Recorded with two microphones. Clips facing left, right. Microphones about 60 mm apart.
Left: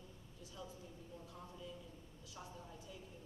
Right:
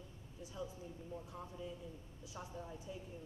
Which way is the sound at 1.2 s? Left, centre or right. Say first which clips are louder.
Right 4 dB; right.